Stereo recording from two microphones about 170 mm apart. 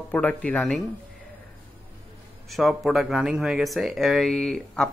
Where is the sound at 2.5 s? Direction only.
Centre (ahead or behind).